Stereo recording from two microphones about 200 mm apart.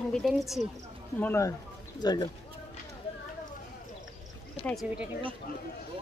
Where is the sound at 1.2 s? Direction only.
15° left (ahead or behind).